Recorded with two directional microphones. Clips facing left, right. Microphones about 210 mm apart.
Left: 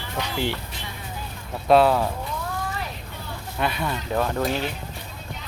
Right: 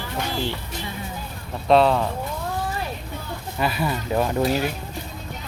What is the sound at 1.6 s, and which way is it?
Speech, 5° left (ahead or behind).